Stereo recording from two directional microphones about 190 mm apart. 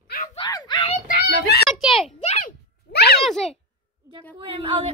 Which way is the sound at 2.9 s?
60° left (ahead or behind).